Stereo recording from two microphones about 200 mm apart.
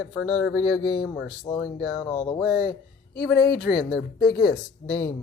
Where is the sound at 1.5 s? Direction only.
20° left (ahead or behind).